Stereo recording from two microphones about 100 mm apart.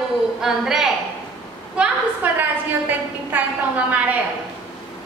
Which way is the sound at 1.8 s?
20° right (ahead or behind).